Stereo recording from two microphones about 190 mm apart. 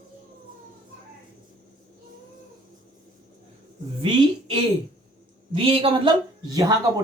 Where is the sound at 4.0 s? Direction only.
25° right (ahead or behind).